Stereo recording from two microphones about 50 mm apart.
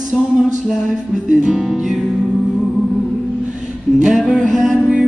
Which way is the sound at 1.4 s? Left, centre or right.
Centre.